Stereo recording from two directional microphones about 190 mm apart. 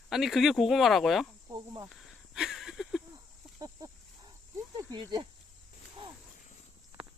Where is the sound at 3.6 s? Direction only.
20° right (ahead or behind).